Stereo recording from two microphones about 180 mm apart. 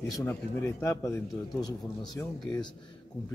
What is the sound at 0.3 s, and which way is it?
A man's voice, 15° left (ahead or behind).